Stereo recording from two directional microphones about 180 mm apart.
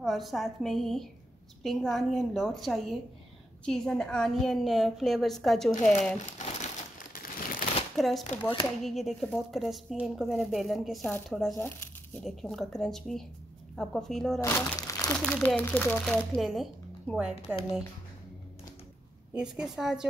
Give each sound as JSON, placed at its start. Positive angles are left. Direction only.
{"t": 0.0, "sound": "speech", "side_deg": 0}
{"t": 6.1, "sound": "crumpling", "side_deg": 40}
{"t": 8.0, "sound": "speech", "side_deg": 0}
{"t": 14.4, "sound": "speech", "side_deg": 15}
{"t": 15.2, "sound": "speech", "side_deg": 5}
{"t": 16.3, "sound": "speech", "side_deg": 0}
{"t": 19.3, "sound": "speech", "side_deg": -5}